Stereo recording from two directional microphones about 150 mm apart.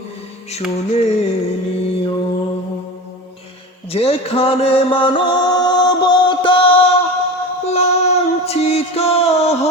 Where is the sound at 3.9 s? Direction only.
40° left (ahead or behind).